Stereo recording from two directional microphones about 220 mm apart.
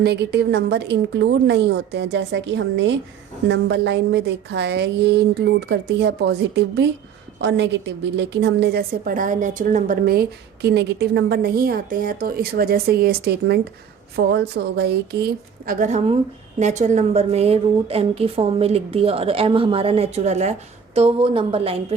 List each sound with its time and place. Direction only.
0.0 s a woman's voice: 50° right (ahead or behind); by 21.9 s 25° right (ahead or behind)